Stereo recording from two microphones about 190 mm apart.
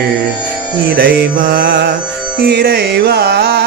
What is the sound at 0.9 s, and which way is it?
Mantra, 50° right (ahead or behind).